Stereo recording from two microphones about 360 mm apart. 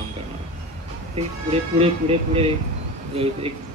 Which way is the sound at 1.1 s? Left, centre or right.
Centre.